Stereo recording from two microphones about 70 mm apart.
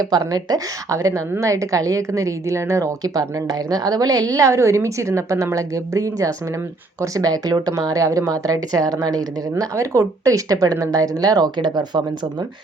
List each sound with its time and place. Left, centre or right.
0.3 s a woman's voice: right
9.7 s speech: right